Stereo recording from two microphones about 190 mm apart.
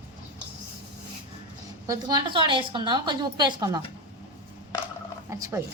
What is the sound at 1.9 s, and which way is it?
A woman's voice, 25° right (ahead or behind).